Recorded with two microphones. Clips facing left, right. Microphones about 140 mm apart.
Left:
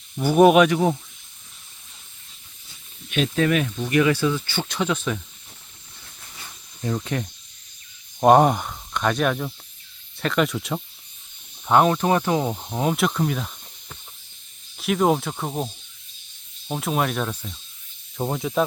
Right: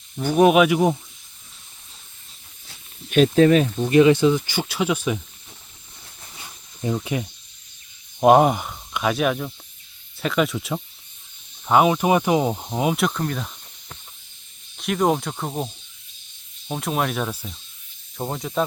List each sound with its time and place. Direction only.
0.2 s speech: 5° left (ahead or behind)
3.1 s speech: 40° right (ahead or behind); by 5.2 s 10° right (ahead or behind)
6.8 s speech: 10° right (ahead or behind)
14.8 s speech: centre (ahead or behind)